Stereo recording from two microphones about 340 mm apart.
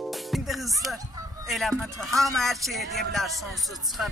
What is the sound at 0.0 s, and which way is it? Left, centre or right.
Music, centre.